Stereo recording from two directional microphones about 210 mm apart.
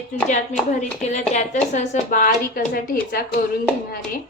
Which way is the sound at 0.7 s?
35° left (ahead or behind).